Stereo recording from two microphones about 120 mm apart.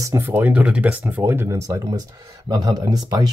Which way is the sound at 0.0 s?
25° right (ahead or behind).